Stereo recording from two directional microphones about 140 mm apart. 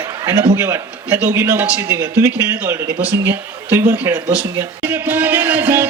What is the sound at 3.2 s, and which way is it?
Speech, 15° right (ahead or behind).